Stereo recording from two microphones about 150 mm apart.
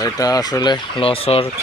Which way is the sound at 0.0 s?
25° left (ahead or behind).